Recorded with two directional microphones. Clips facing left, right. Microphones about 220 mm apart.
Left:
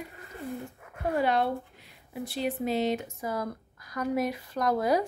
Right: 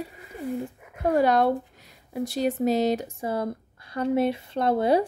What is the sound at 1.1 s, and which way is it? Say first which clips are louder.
Speech: right 6 dB; 40° right (ahead or behind).